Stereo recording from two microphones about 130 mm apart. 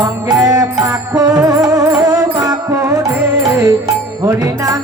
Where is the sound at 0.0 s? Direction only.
25° right (ahead or behind).